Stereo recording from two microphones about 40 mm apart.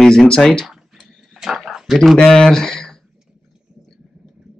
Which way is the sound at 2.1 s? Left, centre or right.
Centre.